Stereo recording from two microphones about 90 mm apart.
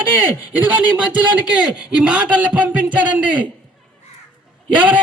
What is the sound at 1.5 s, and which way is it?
A man's voice, 10° right (ahead or behind).